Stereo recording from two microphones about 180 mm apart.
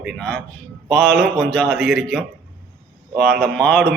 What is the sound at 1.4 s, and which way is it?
Speech, 5° left (ahead or behind).